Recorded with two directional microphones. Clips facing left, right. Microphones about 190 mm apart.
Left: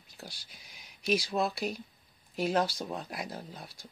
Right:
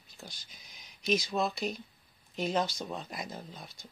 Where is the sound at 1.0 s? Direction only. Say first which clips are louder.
Left 1 dB; 10° left (ahead or behind).